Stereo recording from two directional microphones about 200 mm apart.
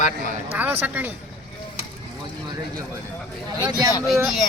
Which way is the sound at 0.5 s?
10° right (ahead or behind).